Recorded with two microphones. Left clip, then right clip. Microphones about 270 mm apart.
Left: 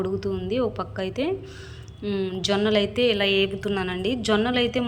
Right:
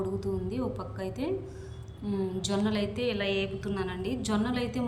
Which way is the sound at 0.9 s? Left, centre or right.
Centre.